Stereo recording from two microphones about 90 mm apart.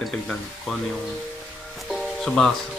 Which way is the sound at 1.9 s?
5° left (ahead or behind).